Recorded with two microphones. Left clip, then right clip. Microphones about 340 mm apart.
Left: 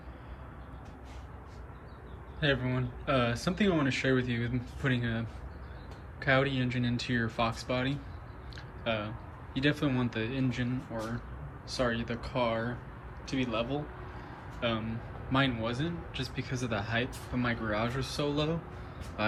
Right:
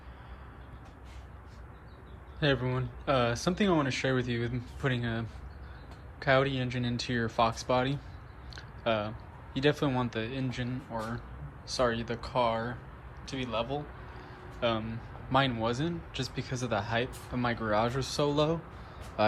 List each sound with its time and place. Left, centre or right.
2.4 s a man's voice: centre
11.8 s a man's voice: centre